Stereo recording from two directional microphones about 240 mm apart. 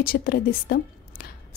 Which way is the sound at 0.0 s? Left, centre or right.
Left.